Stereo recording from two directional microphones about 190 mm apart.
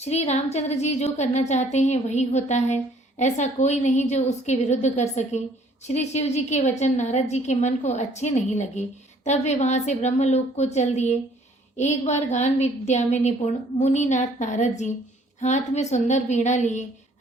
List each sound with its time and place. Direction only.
0.0 s a woman's voice: 35° left (ahead or behind)